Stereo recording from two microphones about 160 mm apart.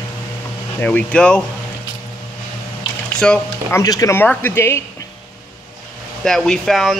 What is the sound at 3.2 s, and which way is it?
Speech, 5° left (ahead or behind).